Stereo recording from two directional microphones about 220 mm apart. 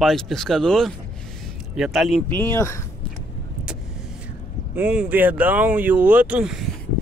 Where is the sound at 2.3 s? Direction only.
10° left (ahead or behind).